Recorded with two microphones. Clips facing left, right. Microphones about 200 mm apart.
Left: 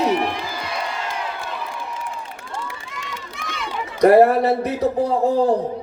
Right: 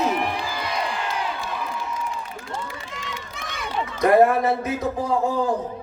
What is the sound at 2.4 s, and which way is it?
Run, 60° left (ahead or behind).